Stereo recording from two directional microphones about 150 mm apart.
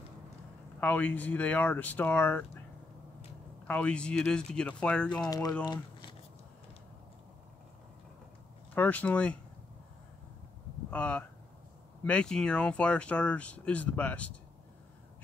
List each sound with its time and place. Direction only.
0.7 s speech: 10° left (ahead or behind)
3.6 s speech: 10° left (ahead or behind)
5.3 s speech: 25° left (ahead or behind)
5.7 s a sound: 30° left (ahead or behind)
8.7 s speech: 10° left (ahead or behind)
10.9 s speech: 10° left (ahead or behind)